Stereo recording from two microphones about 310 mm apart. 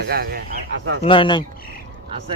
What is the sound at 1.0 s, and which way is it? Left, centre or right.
Speech, centre.